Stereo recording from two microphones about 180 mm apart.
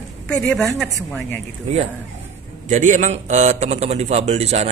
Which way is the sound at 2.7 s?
45° right (ahead or behind).